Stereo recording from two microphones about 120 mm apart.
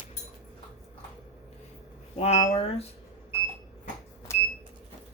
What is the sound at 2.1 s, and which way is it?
Speech, 60° left (ahead or behind).